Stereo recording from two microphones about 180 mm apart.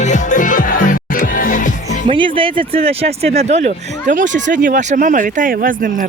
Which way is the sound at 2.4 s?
30° right (ahead or behind).